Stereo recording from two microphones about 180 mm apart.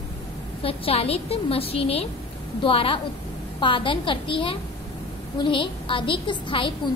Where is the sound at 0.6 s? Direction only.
30° left (ahead or behind).